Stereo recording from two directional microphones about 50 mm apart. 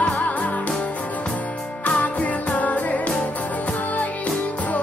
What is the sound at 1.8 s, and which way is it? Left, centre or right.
Music, left.